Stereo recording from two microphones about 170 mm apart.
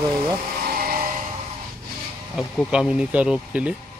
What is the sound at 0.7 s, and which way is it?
Music, 60° right (ahead or behind).